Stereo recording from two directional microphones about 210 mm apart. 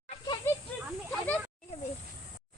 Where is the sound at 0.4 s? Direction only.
10° left (ahead or behind).